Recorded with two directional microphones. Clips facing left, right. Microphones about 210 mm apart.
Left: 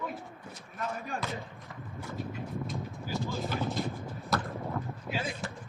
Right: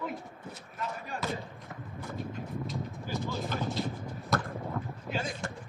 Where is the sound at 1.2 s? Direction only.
40° right (ahead or behind).